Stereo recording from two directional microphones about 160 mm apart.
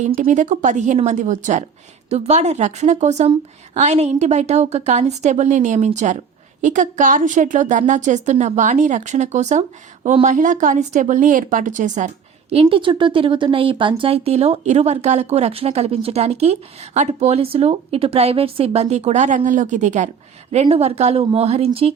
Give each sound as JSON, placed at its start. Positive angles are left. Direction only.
{"t": 0.2, "sound": "a woman's voice", "side_deg": -50}